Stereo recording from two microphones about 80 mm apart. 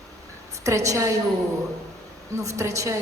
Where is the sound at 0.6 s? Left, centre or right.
Right.